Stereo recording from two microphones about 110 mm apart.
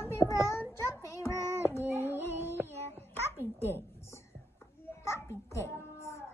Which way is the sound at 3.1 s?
20° left (ahead or behind).